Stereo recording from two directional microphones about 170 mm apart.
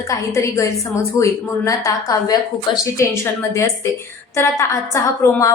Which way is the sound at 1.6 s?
20° left (ahead or behind).